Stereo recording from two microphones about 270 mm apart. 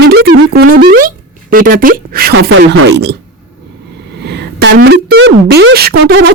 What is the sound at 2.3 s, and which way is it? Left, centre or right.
Speech, right.